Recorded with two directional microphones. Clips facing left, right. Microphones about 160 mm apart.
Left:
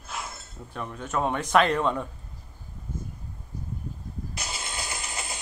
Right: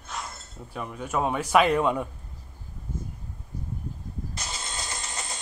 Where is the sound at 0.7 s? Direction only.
5° right (ahead or behind).